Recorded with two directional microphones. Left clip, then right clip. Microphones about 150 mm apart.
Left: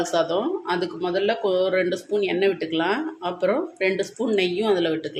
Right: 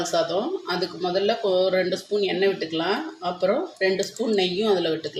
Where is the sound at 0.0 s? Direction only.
10° left (ahead or behind).